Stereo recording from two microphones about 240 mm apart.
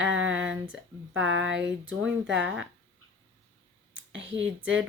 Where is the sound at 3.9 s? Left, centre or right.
Right.